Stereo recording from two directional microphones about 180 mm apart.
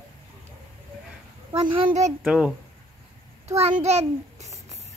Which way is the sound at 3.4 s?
35° right (ahead or behind).